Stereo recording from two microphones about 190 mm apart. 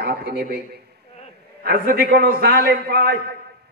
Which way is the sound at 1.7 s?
55° right (ahead or behind).